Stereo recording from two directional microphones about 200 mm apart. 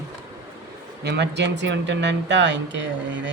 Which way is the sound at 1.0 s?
60° right (ahead or behind).